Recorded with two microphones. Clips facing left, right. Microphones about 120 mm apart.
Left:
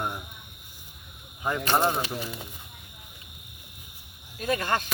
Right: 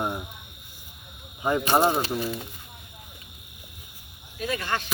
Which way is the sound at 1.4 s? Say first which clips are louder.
Right 3 dB; 15° right (ahead or behind).